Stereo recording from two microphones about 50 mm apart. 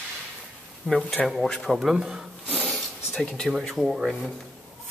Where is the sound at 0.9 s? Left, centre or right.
Centre.